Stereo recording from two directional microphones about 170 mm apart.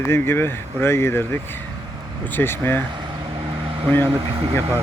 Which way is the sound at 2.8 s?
25° right (ahead or behind).